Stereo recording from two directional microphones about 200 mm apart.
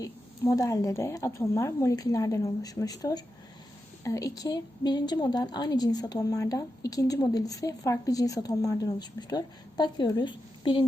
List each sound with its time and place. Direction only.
0.0 s a woman's voice: 20° left (ahead or behind)